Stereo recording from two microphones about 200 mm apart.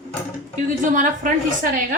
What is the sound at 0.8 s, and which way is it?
A woman's voice, 40° right (ahead or behind).